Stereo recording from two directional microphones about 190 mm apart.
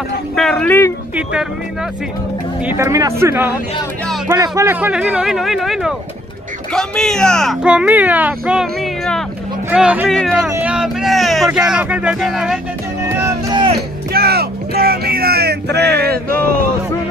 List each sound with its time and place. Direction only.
0.4 s speech: 5° left (ahead or behind)
1.1 s speech: 5° right (ahead or behind)
2.6 s speech: 10° right (ahead or behind)
13.2 s speech: 25° right (ahead or behind)
14.1 s speech: 55° right (ahead or behind)